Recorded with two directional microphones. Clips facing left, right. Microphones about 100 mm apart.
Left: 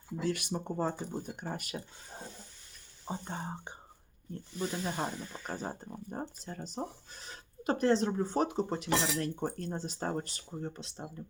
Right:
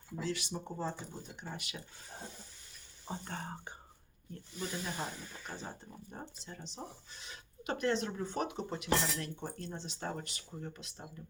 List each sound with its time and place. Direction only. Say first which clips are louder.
0.2 s speech: left 4 dB; 55° left (ahead or behind)
3.1 s speech: left 3 dB; 20° left (ahead or behind); by 8.9 s 35° left (ahead or behind)
9.2 s speech: left 7 dB; 45° left (ahead or behind); by 11.0 s 30° left (ahead or behind)